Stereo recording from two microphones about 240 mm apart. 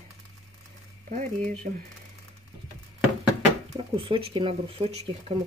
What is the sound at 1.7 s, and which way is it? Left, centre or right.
Speech, right.